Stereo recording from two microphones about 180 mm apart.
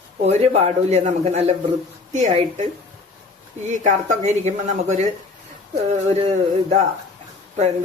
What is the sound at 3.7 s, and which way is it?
A man's voice, 40° right (ahead or behind).